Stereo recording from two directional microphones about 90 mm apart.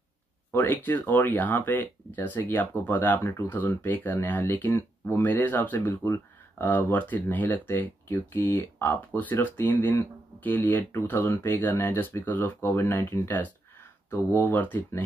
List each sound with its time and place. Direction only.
0.5 s speech: 20° left (ahead or behind)